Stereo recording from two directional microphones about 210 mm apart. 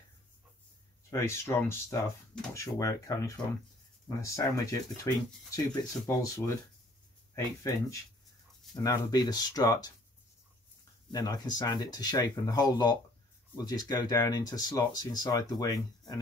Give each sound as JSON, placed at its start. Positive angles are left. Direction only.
{"t": 1.1, "sound": "speech", "side_deg": 15}
{"t": 11.1, "sound": "speech", "side_deg": 20}